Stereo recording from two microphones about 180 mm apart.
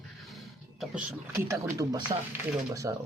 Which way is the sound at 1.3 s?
15° right (ahead or behind).